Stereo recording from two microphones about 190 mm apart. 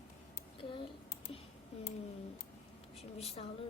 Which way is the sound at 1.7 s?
35° left (ahead or behind).